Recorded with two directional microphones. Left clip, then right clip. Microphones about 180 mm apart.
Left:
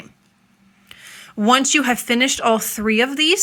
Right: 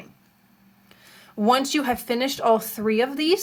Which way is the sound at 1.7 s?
35° left (ahead or behind).